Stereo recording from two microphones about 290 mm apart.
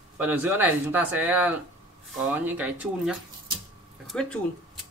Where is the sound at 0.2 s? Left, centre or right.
Centre.